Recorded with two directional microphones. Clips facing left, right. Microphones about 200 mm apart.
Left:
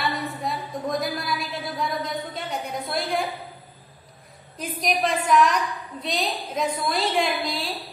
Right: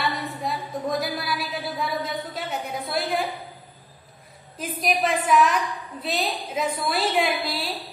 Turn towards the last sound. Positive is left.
turn(degrees=-5)  # may be behind; listen again after turning